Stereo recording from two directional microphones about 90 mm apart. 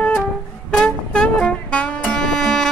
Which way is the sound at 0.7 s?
10° left (ahead or behind).